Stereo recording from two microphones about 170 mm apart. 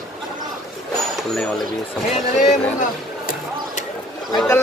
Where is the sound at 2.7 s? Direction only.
50° left (ahead or behind).